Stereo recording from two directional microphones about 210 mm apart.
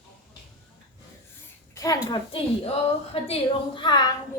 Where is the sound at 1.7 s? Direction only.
15° left (ahead or behind).